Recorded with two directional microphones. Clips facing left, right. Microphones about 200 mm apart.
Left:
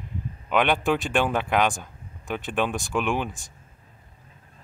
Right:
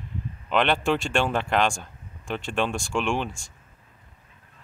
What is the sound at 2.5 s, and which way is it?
Speech, 5° left (ahead or behind).